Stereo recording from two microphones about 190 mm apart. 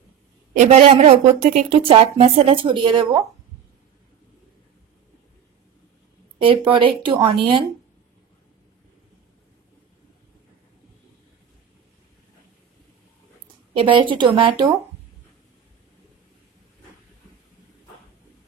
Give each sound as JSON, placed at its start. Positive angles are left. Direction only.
{"t": 0.6, "sound": "a woman's voice", "side_deg": -35}
{"t": 6.4, "sound": "speech", "side_deg": -25}
{"t": 13.7, "sound": "speech", "side_deg": -25}